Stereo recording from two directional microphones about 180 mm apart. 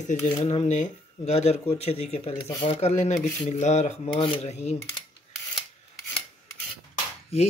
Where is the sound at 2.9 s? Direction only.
40° left (ahead or behind).